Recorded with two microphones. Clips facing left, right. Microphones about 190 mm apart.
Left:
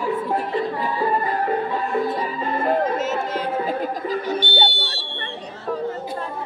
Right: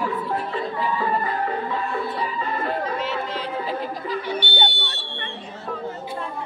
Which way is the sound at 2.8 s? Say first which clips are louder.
Left 4 dB; 45° left (ahead or behind).